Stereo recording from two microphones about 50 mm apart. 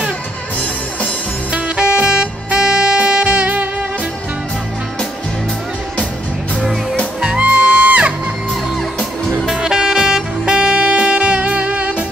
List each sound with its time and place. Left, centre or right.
1.5 s music: right
6.6 s music: centre
7.2 s music: centre
9.5 s music: centre